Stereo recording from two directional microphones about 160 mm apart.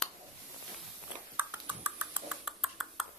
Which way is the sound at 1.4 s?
10° right (ahead or behind).